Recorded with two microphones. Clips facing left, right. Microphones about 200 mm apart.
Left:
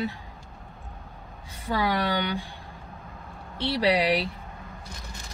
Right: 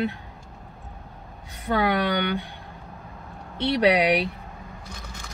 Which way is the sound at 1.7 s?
55° right (ahead or behind).